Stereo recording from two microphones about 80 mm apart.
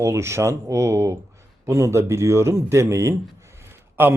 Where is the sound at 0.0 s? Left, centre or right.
Right.